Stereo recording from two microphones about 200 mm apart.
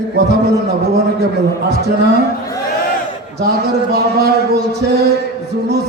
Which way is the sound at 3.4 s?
55° right (ahead or behind).